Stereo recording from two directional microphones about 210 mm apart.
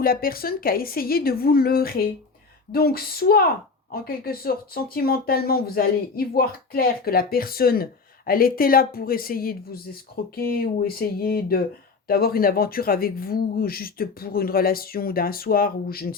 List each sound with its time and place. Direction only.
0.0 s speech: 45° left (ahead or behind)